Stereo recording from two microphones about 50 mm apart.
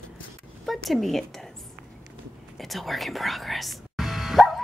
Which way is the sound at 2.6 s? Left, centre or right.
Centre.